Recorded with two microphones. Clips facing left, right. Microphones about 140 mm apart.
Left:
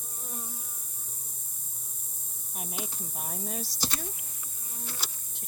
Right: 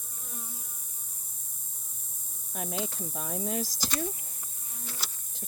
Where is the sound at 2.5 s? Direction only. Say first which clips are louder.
Right 5 dB; 90° right.